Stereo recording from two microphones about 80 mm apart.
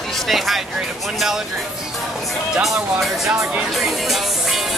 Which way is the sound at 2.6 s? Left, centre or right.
Centre.